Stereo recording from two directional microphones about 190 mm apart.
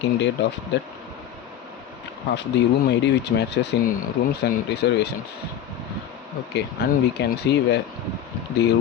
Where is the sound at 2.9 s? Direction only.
65° left (ahead or behind).